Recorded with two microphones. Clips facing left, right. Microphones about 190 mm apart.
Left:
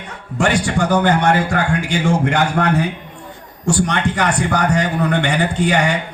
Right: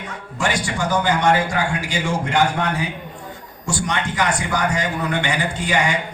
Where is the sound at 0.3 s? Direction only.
60° left (ahead or behind).